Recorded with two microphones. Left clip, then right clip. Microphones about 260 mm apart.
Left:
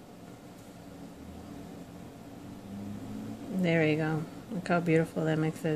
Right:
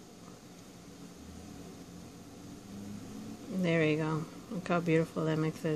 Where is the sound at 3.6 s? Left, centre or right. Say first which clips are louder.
Left 2 dB; centre.